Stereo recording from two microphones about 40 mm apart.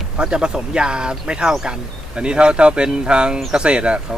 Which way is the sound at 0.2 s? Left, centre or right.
Right.